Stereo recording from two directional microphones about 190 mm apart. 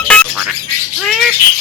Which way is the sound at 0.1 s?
Centre (ahead or behind).